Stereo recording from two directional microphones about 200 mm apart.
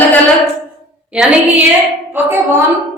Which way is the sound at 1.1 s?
5° right (ahead or behind).